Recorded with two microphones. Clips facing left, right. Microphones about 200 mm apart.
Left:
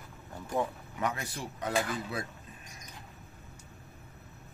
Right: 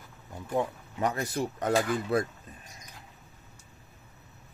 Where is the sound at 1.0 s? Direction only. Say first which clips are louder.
Right 6 dB; 40° right (ahead or behind).